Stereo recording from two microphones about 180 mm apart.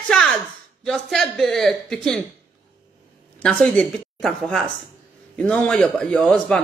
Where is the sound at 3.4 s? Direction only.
5° left (ahead or behind).